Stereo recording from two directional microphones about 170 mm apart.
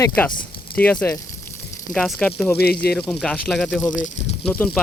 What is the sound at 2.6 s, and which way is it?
Speech, 65° left (ahead or behind).